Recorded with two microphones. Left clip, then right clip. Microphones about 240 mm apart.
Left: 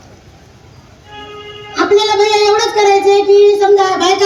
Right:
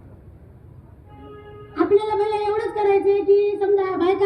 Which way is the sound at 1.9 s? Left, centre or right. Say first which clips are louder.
Left 10 dB; left.